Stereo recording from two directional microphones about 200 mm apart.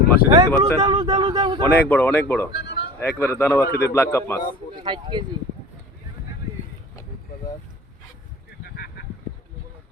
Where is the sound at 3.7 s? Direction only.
50° left (ahead or behind).